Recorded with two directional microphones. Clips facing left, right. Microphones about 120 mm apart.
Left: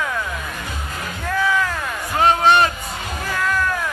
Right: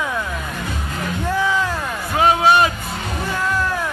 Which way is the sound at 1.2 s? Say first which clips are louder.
Even; 20° right (ahead or behind).